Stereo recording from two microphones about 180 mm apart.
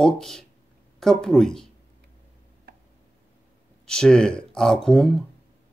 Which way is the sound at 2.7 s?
60° right (ahead or behind).